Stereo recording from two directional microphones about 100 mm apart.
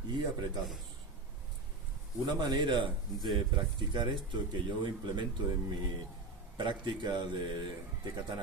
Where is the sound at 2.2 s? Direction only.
45° right (ahead or behind).